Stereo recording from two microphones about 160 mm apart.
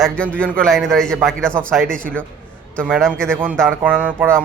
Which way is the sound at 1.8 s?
60° right (ahead or behind).